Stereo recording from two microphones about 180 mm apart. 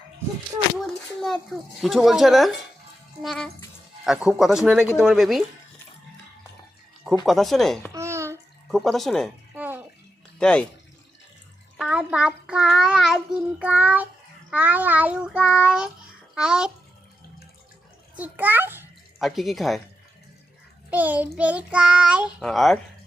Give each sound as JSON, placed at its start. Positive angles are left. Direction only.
{"t": 0.8, "sound": "child singing", "side_deg": 0}
{"t": 7.3, "sound": "child singing", "side_deg": 0}
{"t": 7.9, "sound": "babbling", "side_deg": -15}
{"t": 8.7, "sound": "child singing", "side_deg": 0}
{"t": 9.6, "sound": "bathtub", "side_deg": -10}
{"t": 10.3, "sound": "speech", "side_deg": 5}
{"t": 11.8, "sound": "child singing", "side_deg": -5}
{"t": 16.3, "sound": "a child's voice", "side_deg": -5}
{"t": 18.2, "sound": "child singing", "side_deg": -10}
{"t": 19.2, "sound": "child singing", "side_deg": 0}
{"t": 20.9, "sound": "child singing", "side_deg": -10}